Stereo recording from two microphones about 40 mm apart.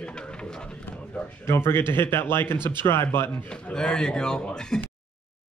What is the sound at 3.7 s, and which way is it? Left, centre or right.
Speech, left.